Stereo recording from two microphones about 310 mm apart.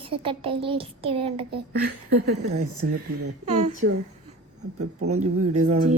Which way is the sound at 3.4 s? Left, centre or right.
Right.